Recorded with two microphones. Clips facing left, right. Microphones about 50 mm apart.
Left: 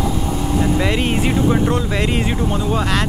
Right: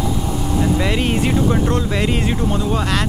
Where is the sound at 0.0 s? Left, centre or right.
Centre.